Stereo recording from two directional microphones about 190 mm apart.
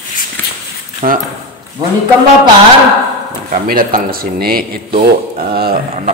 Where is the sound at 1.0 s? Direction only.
45° right (ahead or behind).